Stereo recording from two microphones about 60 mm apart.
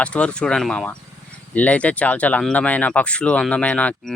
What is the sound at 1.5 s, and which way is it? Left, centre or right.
Speech, left.